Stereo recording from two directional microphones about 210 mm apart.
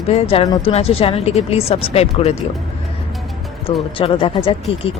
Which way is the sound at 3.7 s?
25° left (ahead or behind).